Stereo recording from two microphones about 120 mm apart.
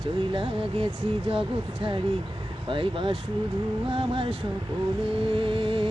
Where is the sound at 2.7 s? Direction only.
45° right (ahead or behind).